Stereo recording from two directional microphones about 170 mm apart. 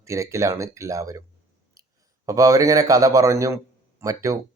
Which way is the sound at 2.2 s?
20° right (ahead or behind).